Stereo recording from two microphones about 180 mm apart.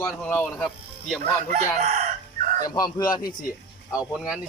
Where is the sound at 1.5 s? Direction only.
45° right (ahead or behind).